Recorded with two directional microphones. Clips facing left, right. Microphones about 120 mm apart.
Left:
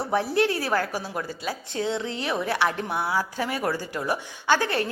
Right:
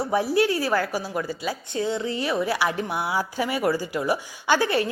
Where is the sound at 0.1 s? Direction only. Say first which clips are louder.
Right 1 dB; 5° right (ahead or behind).